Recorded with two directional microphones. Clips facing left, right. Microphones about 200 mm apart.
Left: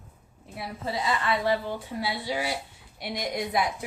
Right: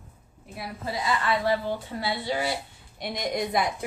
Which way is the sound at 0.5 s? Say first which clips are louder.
Left 1 dB; 25° left (ahead or behind).